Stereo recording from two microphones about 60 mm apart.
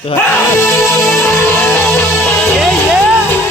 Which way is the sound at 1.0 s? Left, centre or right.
Left.